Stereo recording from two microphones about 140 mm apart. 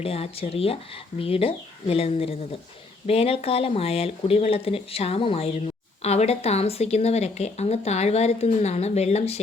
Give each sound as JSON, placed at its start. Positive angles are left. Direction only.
{"t": 0.0, "sound": "speech", "side_deg": 45}